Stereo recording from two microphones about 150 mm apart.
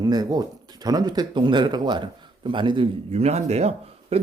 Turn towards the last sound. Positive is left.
turn(degrees=-45)  # may be behind; listen again after turning